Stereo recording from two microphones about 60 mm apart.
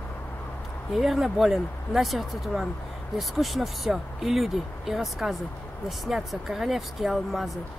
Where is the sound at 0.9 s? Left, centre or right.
Centre.